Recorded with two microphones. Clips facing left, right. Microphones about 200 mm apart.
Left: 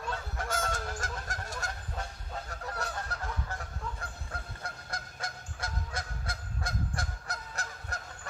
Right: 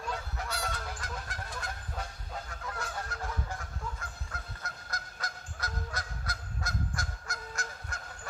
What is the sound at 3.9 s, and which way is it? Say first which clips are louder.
Honk: left 2 dB; 30° left (ahead or behind).